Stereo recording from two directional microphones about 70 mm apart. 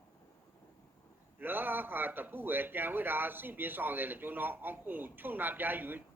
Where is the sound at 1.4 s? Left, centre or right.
Right.